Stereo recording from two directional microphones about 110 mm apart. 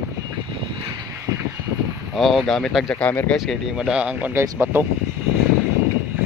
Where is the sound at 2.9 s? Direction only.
10° left (ahead or behind).